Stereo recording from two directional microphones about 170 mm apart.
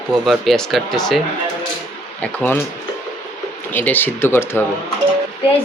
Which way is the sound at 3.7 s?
10° left (ahead or behind).